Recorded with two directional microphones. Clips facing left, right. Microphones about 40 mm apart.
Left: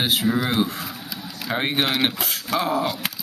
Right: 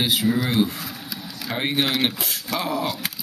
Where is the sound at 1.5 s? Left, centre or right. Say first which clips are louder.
Left 1 dB; centre.